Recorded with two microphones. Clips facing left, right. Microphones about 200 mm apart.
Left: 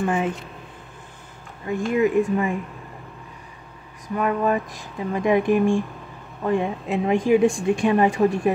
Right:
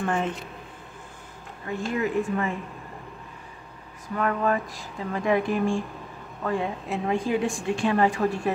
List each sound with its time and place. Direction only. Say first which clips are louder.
0.0 s speech: left 4 dB; 5° left (ahead or behind)
1.7 s speech: left 6 dB; 15° left (ahead or behind)
4.1 s speech: left 3 dB; 15° left (ahead or behind)